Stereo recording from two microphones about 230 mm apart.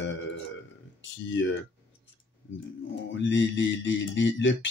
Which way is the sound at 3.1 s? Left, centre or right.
Left.